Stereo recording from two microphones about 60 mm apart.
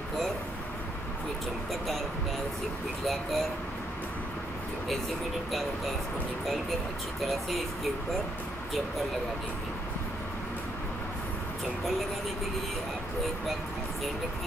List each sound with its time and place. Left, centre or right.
3.1 s speech: centre
7.2 s speech: centre